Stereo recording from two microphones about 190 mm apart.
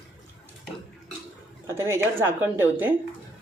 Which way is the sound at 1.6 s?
15° right (ahead or behind).